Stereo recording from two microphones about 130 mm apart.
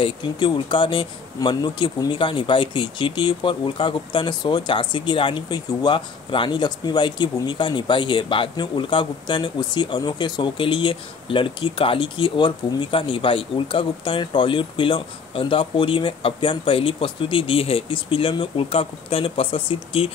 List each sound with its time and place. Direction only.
0.0 s speech: 35° left (ahead or behind)